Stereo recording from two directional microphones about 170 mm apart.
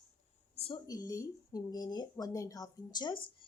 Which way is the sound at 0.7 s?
20° left (ahead or behind).